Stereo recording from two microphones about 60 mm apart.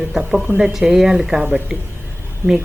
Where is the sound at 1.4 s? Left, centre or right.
Right.